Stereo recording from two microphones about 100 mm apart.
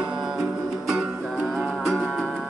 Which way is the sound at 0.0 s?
5° right (ahead or behind).